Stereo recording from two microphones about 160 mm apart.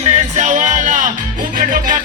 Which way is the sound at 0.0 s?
45° right (ahead or behind).